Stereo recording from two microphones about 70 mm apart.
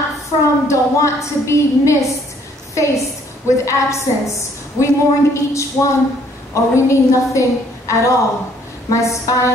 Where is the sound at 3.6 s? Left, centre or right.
Left.